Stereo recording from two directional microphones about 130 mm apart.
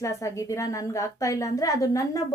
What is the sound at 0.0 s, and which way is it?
A woman's voice, 25° left (ahead or behind).